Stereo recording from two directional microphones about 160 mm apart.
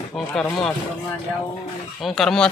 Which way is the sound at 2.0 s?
Centre (ahead or behind).